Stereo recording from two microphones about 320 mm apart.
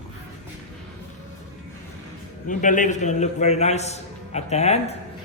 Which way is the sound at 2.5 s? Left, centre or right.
Left.